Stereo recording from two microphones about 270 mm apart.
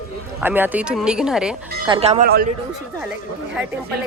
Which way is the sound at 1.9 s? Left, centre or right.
Right.